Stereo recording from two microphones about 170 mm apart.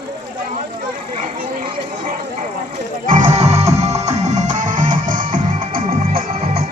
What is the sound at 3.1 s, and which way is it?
Music, 45° right (ahead or behind).